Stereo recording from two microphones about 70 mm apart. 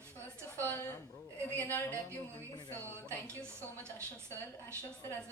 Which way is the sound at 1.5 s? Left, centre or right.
Left.